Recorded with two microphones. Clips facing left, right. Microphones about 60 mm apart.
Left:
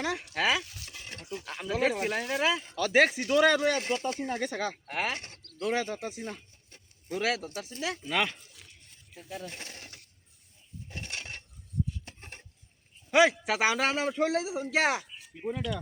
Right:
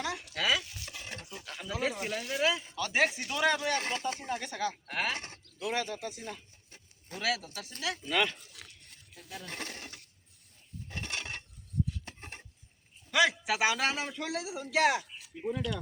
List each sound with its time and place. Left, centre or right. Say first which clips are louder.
0.0 s speech: left 4 dB; left
0.9 s stir: right 1 dB; right
1.5 s speech: left 5 dB; left
2.7 s speech: left 5 dB; left
3.8 s speech: left 3 dB; right
4.2 s speech: left 3 dB; left
4.9 s speech: left 3 dB; centre
5.4 s bird: left 6 dB; left
5.6 s speech: left 3 dB; left
9.5 s speech: right 3 dB; right
10.8 s a sound: right 1 dB; right
13.1 s a sound: left 5 dB; left
13.4 s speech: left 2 dB; left